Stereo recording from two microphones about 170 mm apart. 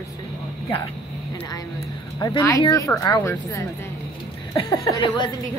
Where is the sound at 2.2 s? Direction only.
20° left (ahead or behind).